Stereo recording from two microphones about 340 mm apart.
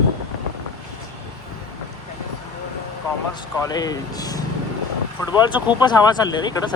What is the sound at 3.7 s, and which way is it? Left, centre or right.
Speech, centre.